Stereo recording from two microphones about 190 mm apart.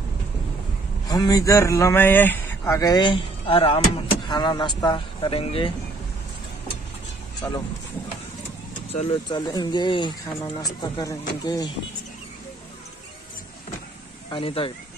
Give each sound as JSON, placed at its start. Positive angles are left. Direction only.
{"t": 1.0, "sound": "speech", "side_deg": 20}
{"t": 7.4, "sound": "speech", "side_deg": 15}
{"t": 9.1, "sound": "speech", "side_deg": 20}
{"t": 14.3, "sound": "speech", "side_deg": 30}